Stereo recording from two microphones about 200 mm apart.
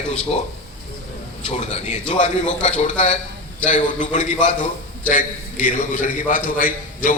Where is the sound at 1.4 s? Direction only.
35° left (ahead or behind).